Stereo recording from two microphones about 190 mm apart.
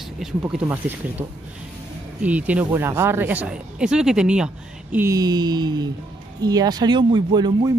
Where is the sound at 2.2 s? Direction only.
5° right (ahead or behind).